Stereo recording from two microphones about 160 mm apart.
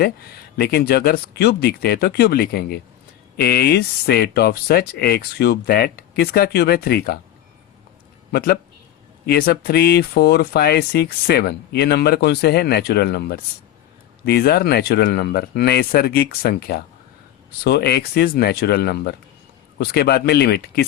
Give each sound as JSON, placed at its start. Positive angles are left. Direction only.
{"t": 0.5, "sound": "speech", "side_deg": 80}
{"t": 8.3, "sound": "speech", "side_deg": 75}
{"t": 17.6, "sound": "speech", "side_deg": 85}